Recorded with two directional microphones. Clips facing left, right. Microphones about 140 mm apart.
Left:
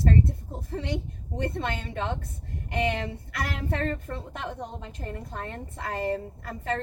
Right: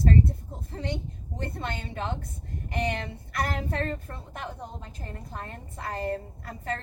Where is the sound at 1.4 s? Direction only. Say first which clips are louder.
Left 4 dB; 65° left (ahead or behind).